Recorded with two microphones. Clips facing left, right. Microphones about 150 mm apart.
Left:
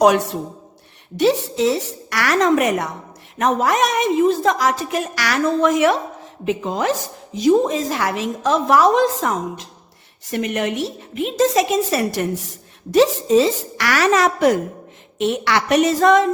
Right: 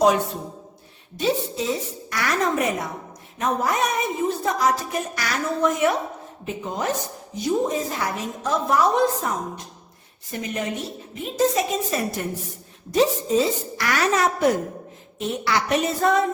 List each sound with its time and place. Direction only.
0.0 s a woman's voice: 80° left
3.3 s a woman's voice: 90° left
10.2 s a woman's voice: 75° left (ahead or behind)
15.2 s a woman's voice: 75° left (ahead or behind)